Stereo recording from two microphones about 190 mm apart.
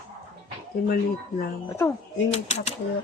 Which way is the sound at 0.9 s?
50° left (ahead or behind).